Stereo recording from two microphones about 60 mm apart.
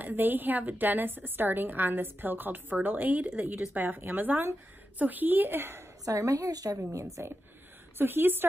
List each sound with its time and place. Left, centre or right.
0.0 s a woman's voice: right
6.0 s a woman's voice: right
6.9 s a woman's voice: right
8.0 s a woman's voice: right